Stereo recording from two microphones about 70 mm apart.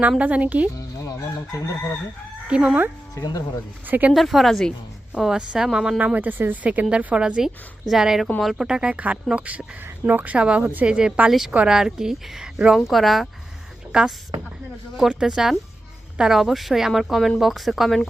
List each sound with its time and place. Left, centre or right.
0.2 s speech: centre
0.8 s chicken: left
2.5 s a woman's voice: centre
3.2 s speech: left
3.8 s speech: right
4.1 s speech: centre
5.1 s a woman's voice: centre
6.0 s a woman's voice: right; by 8.6 s centre
8.6 s a woman's voice: centre
12.7 s speech: centre
13.9 s a woman's voice: centre